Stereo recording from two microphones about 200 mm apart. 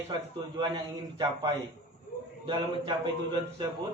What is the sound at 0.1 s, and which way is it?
A man's voice, 20° right (ahead or behind).